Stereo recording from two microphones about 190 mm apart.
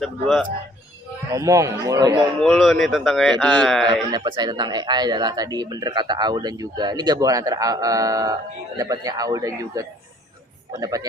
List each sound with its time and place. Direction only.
0.0 s speech: centre (ahead or behind)
1.3 s a man's voice: 15° right (ahead or behind)
2.4 s speech: centre (ahead or behind)
4.1 s speech: 25° right (ahead or behind)